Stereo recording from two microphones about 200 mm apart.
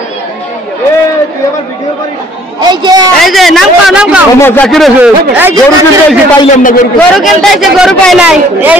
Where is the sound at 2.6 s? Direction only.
20° right (ahead or behind).